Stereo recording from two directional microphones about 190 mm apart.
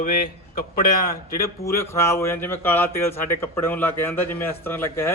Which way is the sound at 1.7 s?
15° left (ahead or behind).